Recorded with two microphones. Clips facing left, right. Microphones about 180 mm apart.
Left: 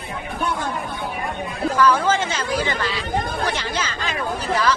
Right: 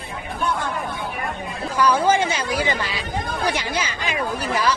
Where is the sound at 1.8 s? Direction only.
15° right (ahead or behind).